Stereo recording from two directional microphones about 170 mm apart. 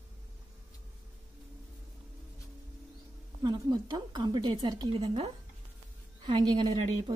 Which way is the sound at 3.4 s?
25° right (ahead or behind).